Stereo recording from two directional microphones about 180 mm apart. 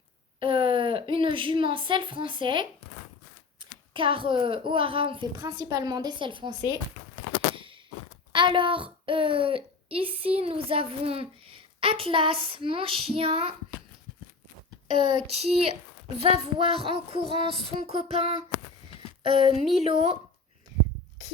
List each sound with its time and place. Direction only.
0.3 s a child's voice: 30° right (ahead or behind)
7.5 s a sound: 30° right (ahead or behind)
8.3 s a child's voice: 25° right (ahead or behind)
14.8 s a child's voice: 25° right (ahead or behind)